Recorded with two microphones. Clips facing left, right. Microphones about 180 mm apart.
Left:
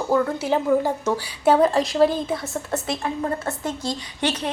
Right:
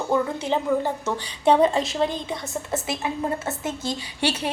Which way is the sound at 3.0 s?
20° right (ahead or behind).